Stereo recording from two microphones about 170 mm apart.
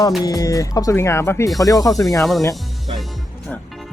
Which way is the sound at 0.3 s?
20° left (ahead or behind).